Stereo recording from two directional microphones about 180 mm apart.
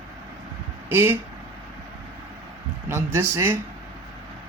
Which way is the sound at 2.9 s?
15° right (ahead or behind).